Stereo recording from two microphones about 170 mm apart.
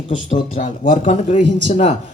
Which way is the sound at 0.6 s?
50° left (ahead or behind).